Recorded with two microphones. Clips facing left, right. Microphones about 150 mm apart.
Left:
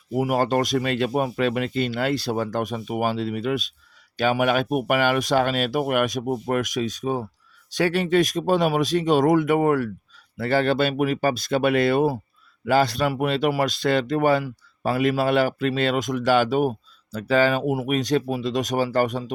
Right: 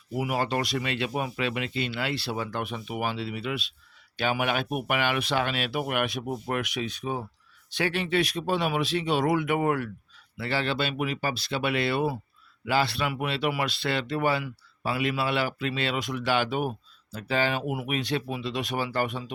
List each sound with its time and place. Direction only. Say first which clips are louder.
0.1 s speech: left 6 dB; 45° left (ahead or behind)